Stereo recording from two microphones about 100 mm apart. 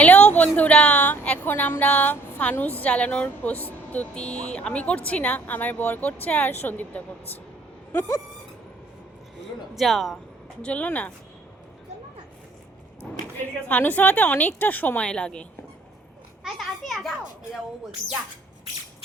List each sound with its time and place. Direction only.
0.0 s a woman's voice: 15° left (ahead or behind)
7.9 s a sound: 35° left (ahead or behind)
9.7 s a child's voice: centre (ahead or behind)
10.6 s a woman's voice: 15° left (ahead or behind)
13.3 s a woman's voice: 15° left (ahead or behind)
16.4 s a child's voice: centre (ahead or behind)